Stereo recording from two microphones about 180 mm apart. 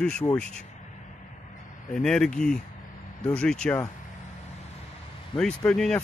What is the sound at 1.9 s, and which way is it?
Speech, 5° left (ahead or behind).